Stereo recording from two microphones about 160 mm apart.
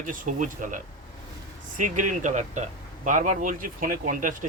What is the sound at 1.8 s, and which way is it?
Speech, 50° right (ahead or behind).